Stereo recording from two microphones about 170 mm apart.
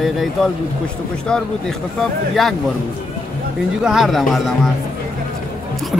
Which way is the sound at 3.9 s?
Centre (ahead or behind).